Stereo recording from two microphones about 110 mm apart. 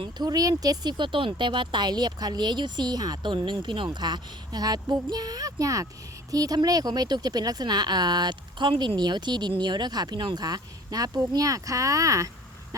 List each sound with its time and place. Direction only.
0.0 s speech: 40° right (ahead or behind)